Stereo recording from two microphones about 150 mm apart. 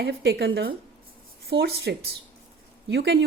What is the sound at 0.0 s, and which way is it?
Speech, 90° right.